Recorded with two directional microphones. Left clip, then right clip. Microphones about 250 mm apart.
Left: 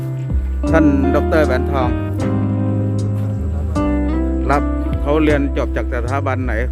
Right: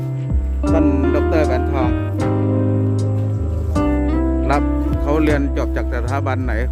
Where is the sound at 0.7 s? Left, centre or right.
Centre.